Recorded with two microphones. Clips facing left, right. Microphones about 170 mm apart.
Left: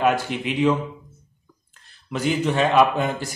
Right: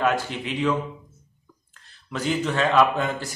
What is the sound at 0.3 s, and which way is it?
Speech, 65° left (ahead or behind).